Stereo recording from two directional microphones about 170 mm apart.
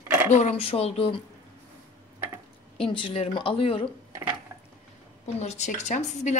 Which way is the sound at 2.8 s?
30° left (ahead or behind).